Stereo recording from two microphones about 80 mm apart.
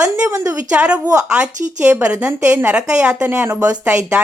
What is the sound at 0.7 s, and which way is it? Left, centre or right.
A woman's voice, centre.